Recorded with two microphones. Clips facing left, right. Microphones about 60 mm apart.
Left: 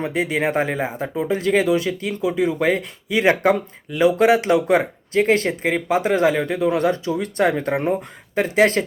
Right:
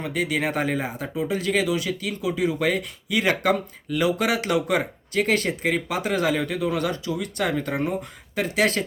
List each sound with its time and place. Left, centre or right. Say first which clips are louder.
0.0 s speech: left 4 dB; left